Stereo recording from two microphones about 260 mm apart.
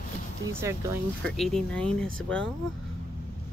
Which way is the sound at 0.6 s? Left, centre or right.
Centre.